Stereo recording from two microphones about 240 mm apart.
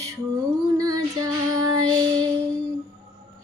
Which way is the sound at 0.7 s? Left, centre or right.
Centre.